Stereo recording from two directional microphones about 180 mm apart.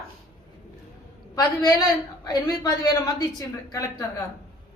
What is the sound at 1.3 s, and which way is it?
Speech, 20° left (ahead or behind).